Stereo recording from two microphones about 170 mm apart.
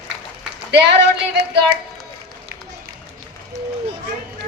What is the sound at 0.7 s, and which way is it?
Speech, 90° right.